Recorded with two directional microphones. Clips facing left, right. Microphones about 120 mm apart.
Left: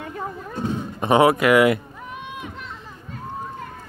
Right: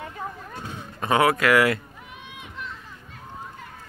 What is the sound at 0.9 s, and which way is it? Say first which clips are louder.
Speech: left 4 dB; 25° left (ahead or behind).